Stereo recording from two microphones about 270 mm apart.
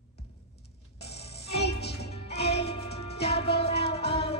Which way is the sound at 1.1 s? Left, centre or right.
Left.